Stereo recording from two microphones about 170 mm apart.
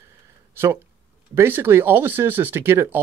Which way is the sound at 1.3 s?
10° right (ahead or behind).